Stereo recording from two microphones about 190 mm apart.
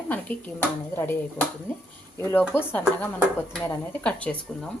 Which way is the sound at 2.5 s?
10° left (ahead or behind).